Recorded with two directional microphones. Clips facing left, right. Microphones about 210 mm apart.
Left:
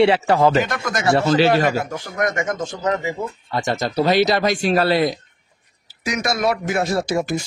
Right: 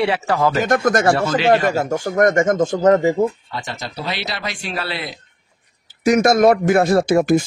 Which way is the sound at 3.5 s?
45° left (ahead or behind).